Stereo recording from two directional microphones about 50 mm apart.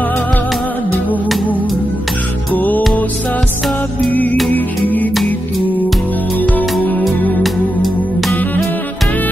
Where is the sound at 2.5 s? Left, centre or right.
Left.